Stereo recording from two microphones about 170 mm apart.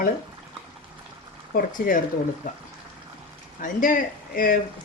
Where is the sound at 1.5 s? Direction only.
55° left (ahead or behind).